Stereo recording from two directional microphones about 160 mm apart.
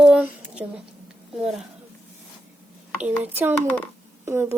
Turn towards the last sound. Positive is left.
turn(degrees=-15)  # may be behind; listen again after turning